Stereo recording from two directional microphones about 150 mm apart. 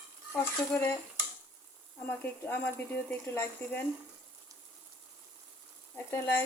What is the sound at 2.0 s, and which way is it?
Speech, 10° left (ahead or behind).